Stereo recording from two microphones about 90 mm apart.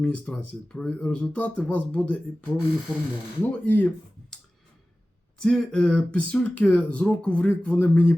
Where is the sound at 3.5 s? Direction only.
20° left (ahead or behind).